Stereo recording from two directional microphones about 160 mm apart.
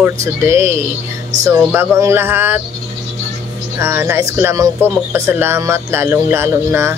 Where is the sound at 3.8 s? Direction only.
15° right (ahead or behind).